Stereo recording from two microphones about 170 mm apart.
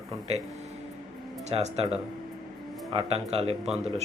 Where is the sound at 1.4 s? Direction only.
40° right (ahead or behind).